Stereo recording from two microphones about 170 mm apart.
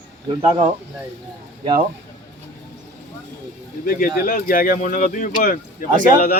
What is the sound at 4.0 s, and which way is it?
Speech, 55° left (ahead or behind).